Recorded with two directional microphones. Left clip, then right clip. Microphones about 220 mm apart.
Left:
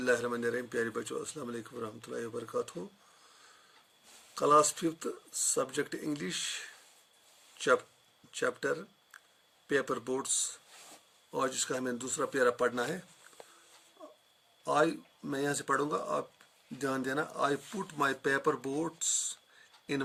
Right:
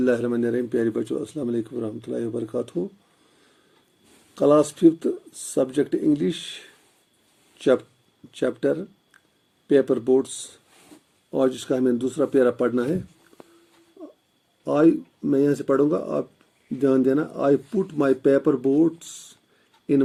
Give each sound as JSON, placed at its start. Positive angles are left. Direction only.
{"t": 0.0, "sound": "speech", "side_deg": 55}
{"t": 4.4, "sound": "speech", "side_deg": 50}
{"t": 8.4, "sound": "speech", "side_deg": 55}
{"t": 11.3, "sound": "speech", "side_deg": 55}
{"t": 14.6, "sound": "speech", "side_deg": 50}